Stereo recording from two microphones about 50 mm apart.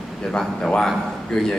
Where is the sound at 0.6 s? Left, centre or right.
Centre.